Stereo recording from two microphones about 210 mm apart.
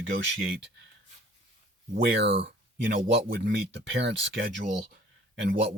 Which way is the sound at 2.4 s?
50° right (ahead or behind).